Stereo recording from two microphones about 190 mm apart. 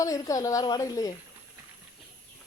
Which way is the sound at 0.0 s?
15° left (ahead or behind).